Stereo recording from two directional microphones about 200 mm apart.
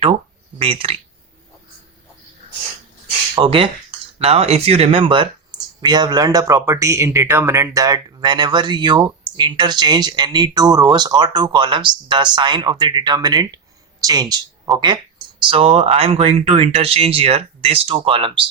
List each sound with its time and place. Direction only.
0.6 s speech: 30° right (ahead or behind)
3.3 s speech: 25° right (ahead or behind)